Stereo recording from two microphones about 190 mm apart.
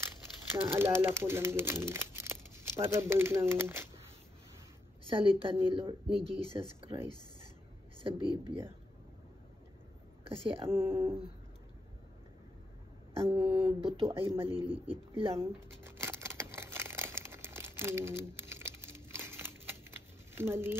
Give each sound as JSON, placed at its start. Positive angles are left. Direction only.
{"t": 0.7, "sound": "speech", "side_deg": -10}
{"t": 5.1, "sound": "speech", "side_deg": -30}
{"t": 8.0, "sound": "speech", "side_deg": -25}
{"t": 10.3, "sound": "speech", "side_deg": -30}
{"t": 10.7, "sound": "speech", "side_deg": -10}
{"t": 13.1, "sound": "a sound", "side_deg": -25}
{"t": 13.7, "sound": "speech", "side_deg": -30}
{"t": 15.3, "sound": "a sound", "side_deg": -15}
{"t": 20.3, "sound": "speech", "side_deg": -10}